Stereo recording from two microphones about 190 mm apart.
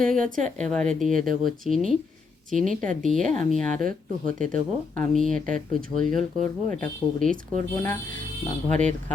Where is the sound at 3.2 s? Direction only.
40° right (ahead or behind).